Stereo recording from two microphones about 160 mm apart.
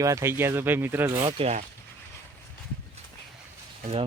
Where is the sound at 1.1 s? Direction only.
35° right (ahead or behind).